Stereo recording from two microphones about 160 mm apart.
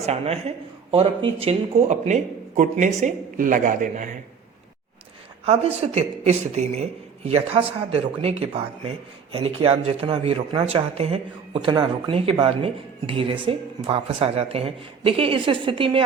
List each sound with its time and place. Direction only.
0.0 s a woman's voice: 40° right (ahead or behind)
5.5 s speech: 40° right (ahead or behind)